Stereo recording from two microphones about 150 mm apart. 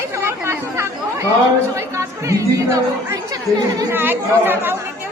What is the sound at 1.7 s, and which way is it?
Speech, 20° right (ahead or behind).